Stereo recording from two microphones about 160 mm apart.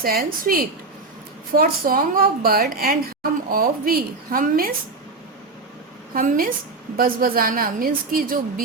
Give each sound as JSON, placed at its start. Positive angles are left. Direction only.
{"t": 0.0, "sound": "a woman's voice", "side_deg": -65}
{"t": 6.1, "sound": "a woman's voice", "side_deg": -60}